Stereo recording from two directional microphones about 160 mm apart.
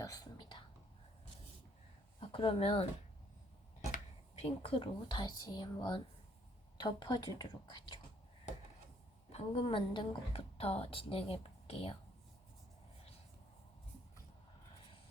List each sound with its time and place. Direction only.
0.0 s whispering: 25° left (ahead or behind)
2.2 s speech: 35° left (ahead or behind)
9.3 s a woman's voice: 35° left (ahead or behind)